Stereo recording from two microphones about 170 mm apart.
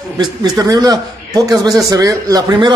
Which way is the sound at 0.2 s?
25° right (ahead or behind).